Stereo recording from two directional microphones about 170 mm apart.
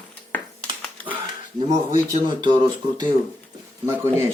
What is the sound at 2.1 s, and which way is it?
Speech, 25° right (ahead or behind).